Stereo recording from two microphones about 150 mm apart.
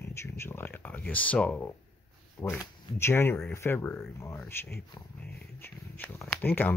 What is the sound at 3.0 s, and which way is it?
Speech, 15° left (ahead or behind).